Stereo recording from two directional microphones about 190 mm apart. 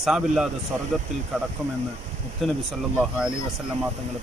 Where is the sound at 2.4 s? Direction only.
Centre (ahead or behind).